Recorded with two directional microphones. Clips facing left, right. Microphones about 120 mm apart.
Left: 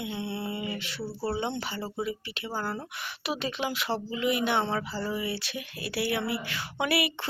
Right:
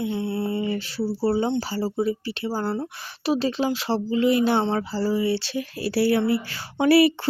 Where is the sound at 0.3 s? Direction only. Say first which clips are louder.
Right 8 dB; 30° right (ahead or behind).